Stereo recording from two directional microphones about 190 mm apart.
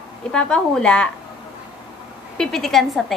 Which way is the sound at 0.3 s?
5° left (ahead or behind).